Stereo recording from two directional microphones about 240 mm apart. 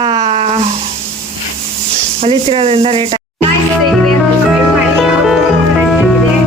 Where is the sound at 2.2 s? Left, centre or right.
Right.